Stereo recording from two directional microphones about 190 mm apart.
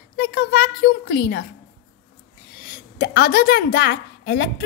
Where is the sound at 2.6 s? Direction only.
55° left (ahead or behind).